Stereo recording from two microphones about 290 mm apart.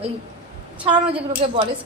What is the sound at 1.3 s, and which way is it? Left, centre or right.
Speech, centre.